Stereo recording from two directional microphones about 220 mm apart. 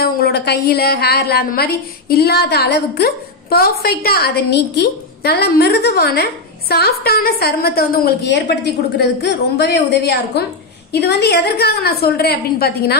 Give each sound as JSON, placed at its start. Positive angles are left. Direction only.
{"t": 0.0, "sound": "a woman's voice", "side_deg": 45}